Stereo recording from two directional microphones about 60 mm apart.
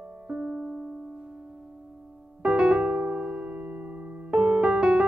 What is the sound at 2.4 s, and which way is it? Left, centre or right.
Piano, centre.